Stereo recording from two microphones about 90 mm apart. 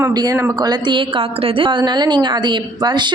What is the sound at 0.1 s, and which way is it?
A woman's voice, 45° right (ahead or behind).